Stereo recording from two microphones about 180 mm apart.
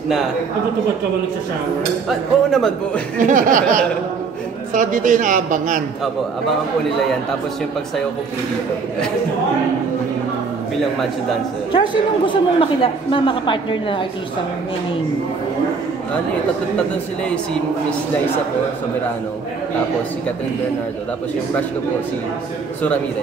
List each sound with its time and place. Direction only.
2.0 s speech: centre (ahead or behind)
3.2 s a woman's voice: 45° right (ahead or behind)
4.7 s a woman's voice: 45° right (ahead or behind)
11.7 s a man's voice: 25° left (ahead or behind)